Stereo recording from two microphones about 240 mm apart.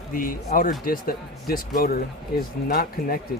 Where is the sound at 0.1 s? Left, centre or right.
Left.